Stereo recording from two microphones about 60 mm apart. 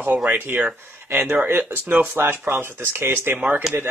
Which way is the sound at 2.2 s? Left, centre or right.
Right.